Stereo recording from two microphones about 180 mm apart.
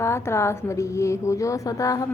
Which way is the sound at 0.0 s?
15° left (ahead or behind).